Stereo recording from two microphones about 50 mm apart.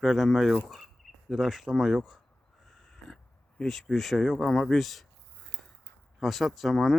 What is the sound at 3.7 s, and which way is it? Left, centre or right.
Speech, centre.